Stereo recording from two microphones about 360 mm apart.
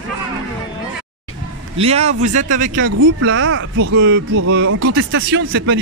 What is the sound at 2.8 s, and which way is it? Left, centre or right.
Speech, right.